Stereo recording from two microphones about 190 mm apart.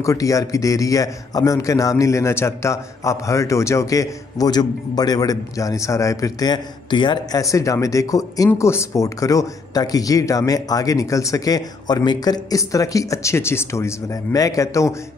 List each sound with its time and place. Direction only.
0.0 s a man's voice: 15° left (ahead or behind)